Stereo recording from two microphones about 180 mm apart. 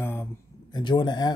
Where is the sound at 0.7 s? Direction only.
25° left (ahead or behind).